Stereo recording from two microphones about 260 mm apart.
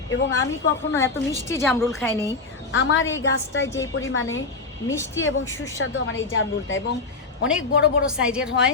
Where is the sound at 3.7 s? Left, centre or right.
Centre.